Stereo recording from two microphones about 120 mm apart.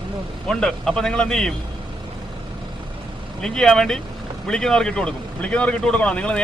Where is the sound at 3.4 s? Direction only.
5° left (ahead or behind).